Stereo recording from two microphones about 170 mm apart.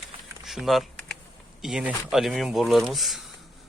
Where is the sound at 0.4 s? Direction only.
Centre (ahead or behind).